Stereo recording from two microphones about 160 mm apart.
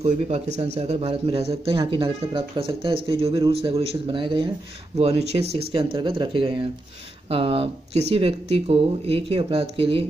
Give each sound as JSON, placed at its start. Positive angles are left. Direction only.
{"t": 0.0, "sound": "speech", "side_deg": -45}